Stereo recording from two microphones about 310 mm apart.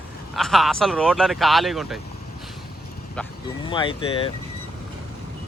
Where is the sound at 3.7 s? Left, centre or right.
Centre.